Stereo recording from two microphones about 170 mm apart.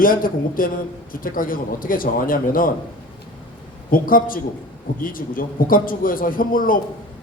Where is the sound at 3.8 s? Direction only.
55° left (ahead or behind).